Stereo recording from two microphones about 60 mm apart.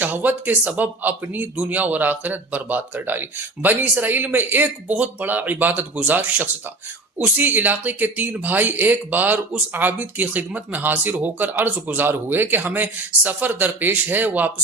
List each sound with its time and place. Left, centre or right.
0.0 s speech: right